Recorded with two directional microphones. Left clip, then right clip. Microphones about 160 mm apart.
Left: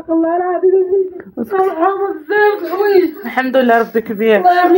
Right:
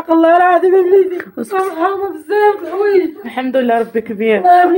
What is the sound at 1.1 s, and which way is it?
Speech, 25° right (ahead or behind).